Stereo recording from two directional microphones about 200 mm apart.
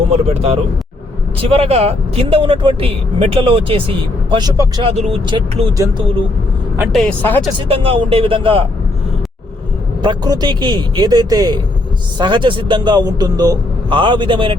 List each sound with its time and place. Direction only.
0.1 s speech: 30° right (ahead or behind)
4.9 s speech: 30° right (ahead or behind)
6.7 s speech: 10° right (ahead or behind)
7.0 s speech: 10° left (ahead or behind)
7.7 s speech: 30° right (ahead or behind)
10.0 s speech: 20° right (ahead or behind)